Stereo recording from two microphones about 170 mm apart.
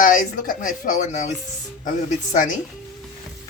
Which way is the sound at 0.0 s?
50° left (ahead or behind).